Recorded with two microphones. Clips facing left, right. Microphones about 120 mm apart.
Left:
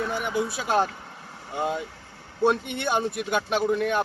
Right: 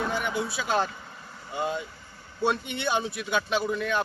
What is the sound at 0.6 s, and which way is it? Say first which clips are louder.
Speech: left 2 dB; 5° left (ahead or behind).